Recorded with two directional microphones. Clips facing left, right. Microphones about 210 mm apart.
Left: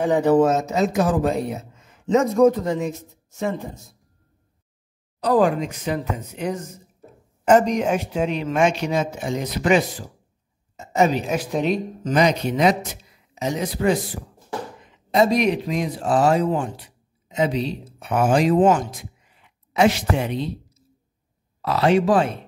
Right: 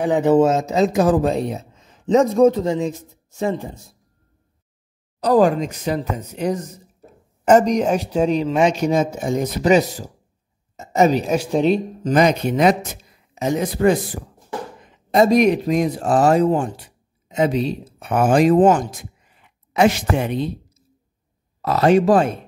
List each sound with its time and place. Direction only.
0.0 s speech: 20° right (ahead or behind)
5.2 s speech: 40° right (ahead or behind)
12.1 s a man's voice: 50° right (ahead or behind)
21.5 s a man's voice: 45° right (ahead or behind)